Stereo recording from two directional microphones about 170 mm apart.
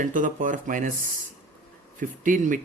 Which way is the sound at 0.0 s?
50° right (ahead or behind).